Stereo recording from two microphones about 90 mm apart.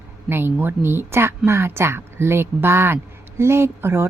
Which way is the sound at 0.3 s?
25° right (ahead or behind).